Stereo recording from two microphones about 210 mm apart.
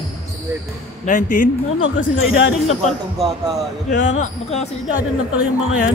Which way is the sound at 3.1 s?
Centre (ahead or behind).